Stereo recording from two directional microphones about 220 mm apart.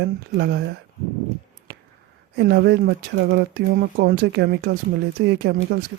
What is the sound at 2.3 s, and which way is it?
Speech, 45° right (ahead or behind).